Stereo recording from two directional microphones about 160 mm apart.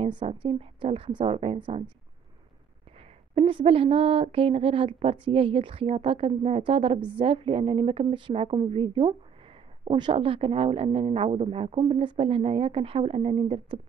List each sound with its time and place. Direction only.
0.0 s speech: 35° right (ahead or behind)
3.3 s speech: 35° right (ahead or behind)